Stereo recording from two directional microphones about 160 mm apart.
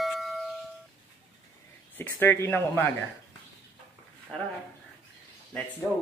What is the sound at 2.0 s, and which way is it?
Speech, 10° left (ahead or behind).